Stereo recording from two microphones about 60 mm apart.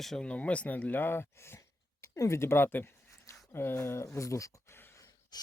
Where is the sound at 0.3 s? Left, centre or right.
Left.